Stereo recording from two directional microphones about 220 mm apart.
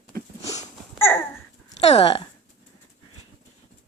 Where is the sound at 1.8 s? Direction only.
30° left (ahead or behind).